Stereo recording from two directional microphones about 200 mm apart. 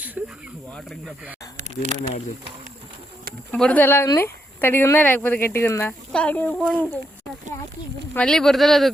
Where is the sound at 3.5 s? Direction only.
5° left (ahead or behind).